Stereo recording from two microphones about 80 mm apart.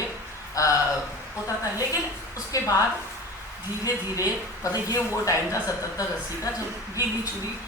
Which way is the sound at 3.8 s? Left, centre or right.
Left.